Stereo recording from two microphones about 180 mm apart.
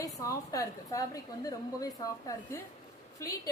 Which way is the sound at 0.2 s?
20° left (ahead or behind).